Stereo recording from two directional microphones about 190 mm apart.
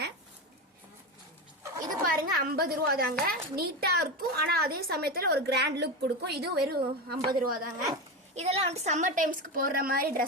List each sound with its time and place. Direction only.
2.0 s a woman's voice: 50° right (ahead or behind)
8.4 s a woman's voice: 35° right (ahead or behind); by 10.2 s 50° right (ahead or behind)